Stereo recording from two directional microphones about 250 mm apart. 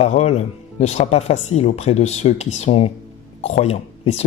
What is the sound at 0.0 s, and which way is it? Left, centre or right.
Speech, left.